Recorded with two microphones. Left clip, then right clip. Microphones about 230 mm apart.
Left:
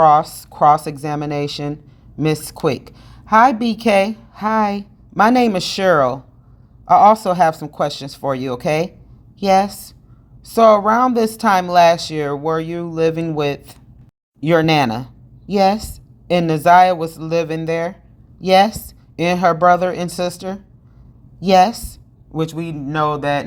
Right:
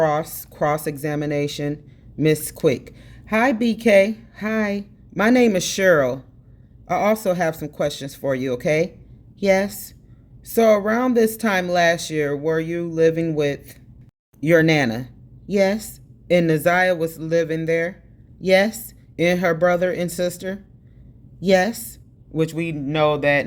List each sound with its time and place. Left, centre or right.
0.0 s speech: centre
14.4 s a woman's voice: centre
22.7 s speech: left